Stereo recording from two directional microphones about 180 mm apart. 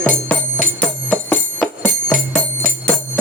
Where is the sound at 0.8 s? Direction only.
10° left (ahead or behind).